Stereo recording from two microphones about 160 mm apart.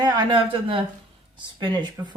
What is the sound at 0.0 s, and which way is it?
Speech, 25° right (ahead or behind).